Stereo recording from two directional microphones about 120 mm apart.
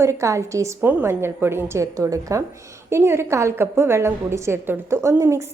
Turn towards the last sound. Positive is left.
turn(degrees=-25)  # may be behind; listen again after turning